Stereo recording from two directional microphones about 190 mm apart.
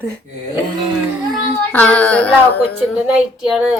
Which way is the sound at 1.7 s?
10° left (ahead or behind).